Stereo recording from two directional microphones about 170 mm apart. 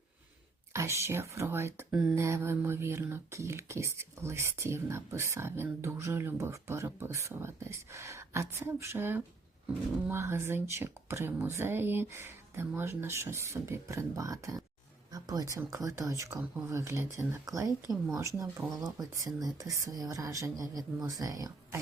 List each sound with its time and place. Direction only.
0.7 s speech: 15° right (ahead or behind)